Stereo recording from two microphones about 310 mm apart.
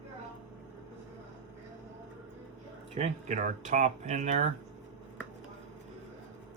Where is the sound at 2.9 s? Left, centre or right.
Right.